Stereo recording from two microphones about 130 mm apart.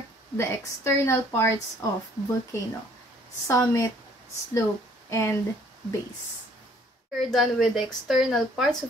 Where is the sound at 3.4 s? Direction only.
25° left (ahead or behind).